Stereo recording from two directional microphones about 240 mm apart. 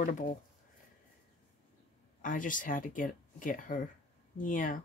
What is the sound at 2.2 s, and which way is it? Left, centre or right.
Speech, left.